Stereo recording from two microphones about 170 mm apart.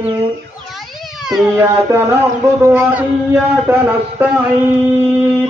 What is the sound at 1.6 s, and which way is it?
Speech, 15° right (ahead or behind).